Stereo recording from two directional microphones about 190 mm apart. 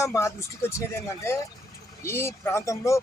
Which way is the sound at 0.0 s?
15° left (ahead or behind).